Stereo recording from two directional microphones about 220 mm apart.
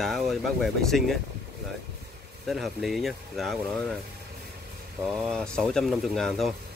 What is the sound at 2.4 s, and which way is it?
Speech, centre (ahead or behind).